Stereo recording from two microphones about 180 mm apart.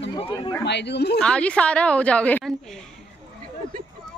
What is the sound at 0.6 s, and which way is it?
Speech, 70° left (ahead or behind).